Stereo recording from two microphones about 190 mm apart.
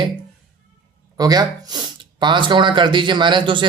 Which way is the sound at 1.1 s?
20° right (ahead or behind).